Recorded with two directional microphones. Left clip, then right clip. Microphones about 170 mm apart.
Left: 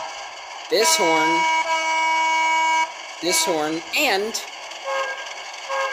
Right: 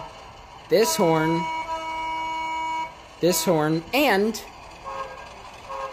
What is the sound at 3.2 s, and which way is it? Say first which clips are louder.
Speech: even; 5° right (ahead or behind).